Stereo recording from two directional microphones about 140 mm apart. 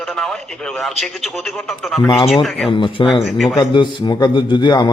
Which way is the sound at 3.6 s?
35° left (ahead or behind).